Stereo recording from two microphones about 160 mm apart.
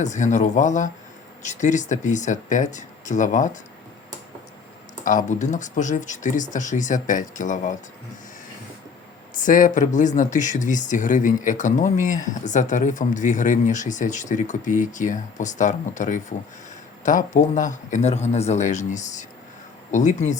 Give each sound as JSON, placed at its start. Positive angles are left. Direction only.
{"t": 0.0, "sound": "speech", "side_deg": 50}
{"t": 5.0, "sound": "speech", "side_deg": 55}
{"t": 9.3, "sound": "speech", "side_deg": 55}